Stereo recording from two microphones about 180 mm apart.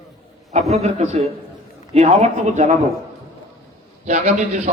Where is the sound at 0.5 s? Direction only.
35° right (ahead or behind).